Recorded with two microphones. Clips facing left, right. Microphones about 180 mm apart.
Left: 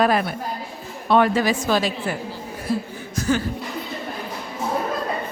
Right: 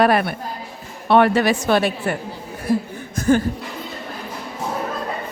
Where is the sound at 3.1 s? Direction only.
55° right (ahead or behind).